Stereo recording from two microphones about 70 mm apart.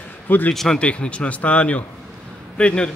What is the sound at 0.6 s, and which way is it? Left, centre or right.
Speech, centre.